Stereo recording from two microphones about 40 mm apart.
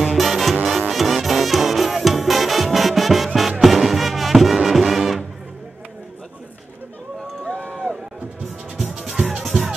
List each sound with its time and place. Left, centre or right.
0.2 s music: centre
7.4 s run: left
8.7 s music: centre